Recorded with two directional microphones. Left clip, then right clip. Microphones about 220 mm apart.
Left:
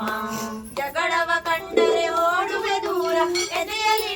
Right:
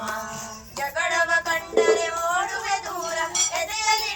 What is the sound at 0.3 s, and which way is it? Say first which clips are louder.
Music: left 5 dB; 50° left (ahead or behind).